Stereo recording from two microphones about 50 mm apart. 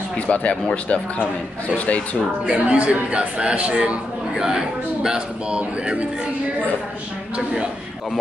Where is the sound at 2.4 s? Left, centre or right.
Right.